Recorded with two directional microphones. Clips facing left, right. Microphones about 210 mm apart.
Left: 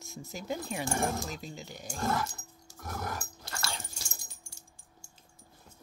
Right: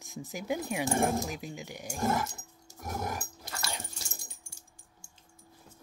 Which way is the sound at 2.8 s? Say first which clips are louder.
Right 2 dB; 20° right (ahead or behind).